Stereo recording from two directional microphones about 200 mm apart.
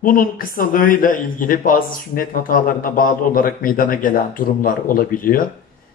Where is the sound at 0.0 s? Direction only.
45° left (ahead or behind).